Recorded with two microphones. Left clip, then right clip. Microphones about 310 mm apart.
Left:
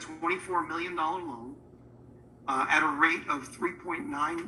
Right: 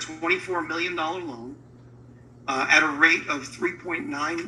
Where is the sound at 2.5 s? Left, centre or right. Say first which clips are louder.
Right 6 dB; centre.